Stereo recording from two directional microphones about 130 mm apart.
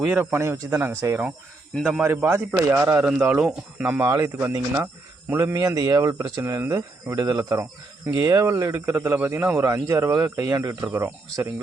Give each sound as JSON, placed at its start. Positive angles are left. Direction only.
{"t": 0.0, "sound": "speech", "side_deg": -15}
{"t": 2.9, "sound": "speech", "side_deg": -10}
{"t": 7.5, "sound": "speech", "side_deg": -15}